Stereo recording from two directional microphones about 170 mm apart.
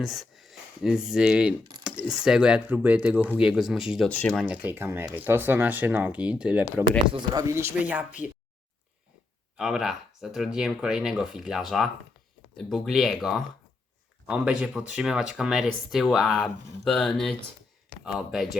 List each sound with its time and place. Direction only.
0.0 s speech: centre (ahead or behind)
4.4 s speech: 10° right (ahead or behind)
7.1 s speech: 20° right (ahead or behind)
9.6 s speech: 5° right (ahead or behind)